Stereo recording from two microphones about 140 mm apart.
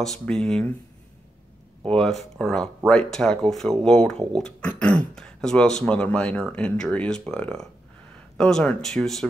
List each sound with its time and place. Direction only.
0.0 s speech: 5° left (ahead or behind)
1.9 s speech: 5° left (ahead or behind)